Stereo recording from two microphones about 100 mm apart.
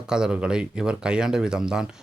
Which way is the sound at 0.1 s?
10° right (ahead or behind).